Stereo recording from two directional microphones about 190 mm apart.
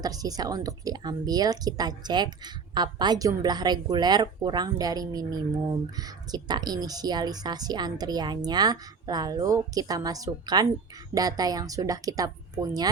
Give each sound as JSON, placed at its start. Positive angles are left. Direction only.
{"t": 0.0, "sound": "speech", "side_deg": -20}